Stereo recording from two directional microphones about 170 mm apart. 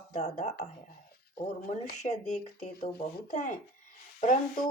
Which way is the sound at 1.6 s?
45° left (ahead or behind).